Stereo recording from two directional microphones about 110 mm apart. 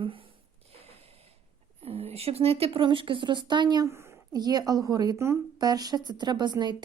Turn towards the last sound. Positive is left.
turn(degrees=-40)  # may be behind; listen again after turning